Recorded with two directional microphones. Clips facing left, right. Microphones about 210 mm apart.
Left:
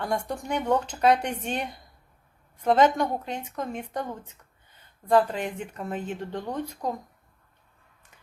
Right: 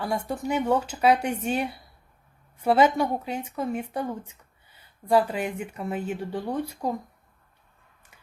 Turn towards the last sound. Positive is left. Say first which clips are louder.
# right 2 dB
turn(degrees=-10)  # may be behind; listen again after turning